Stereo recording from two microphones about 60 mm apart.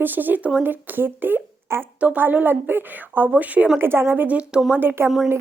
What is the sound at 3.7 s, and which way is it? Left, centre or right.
Speech, right.